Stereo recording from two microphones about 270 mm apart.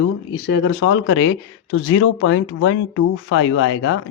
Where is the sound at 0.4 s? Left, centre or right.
Left.